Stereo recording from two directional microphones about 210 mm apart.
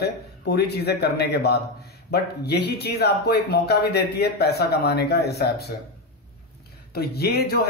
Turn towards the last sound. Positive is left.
turn(degrees=50)  # may be behind; listen again after turning